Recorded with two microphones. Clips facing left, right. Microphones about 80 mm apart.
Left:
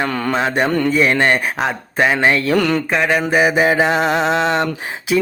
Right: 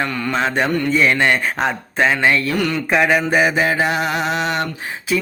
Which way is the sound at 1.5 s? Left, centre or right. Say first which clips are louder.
Left 1 dB; centre.